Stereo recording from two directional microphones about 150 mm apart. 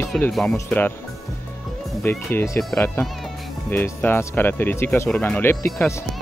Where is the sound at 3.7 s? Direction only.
15° left (ahead or behind).